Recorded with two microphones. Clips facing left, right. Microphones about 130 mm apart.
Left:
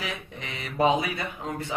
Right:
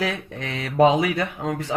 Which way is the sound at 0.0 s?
85° right.